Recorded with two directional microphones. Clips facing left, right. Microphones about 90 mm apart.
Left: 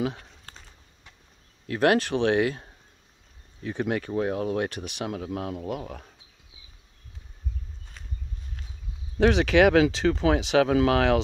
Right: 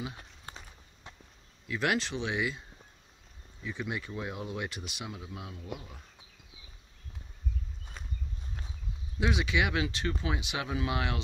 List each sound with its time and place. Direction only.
0.5 s walk: 15° right (ahead or behind)
1.7 s speech: 50° left (ahead or behind); by 6.0 s 75° left (ahead or behind)
9.2 s speech: 70° left (ahead or behind); by 11.1 s 85° left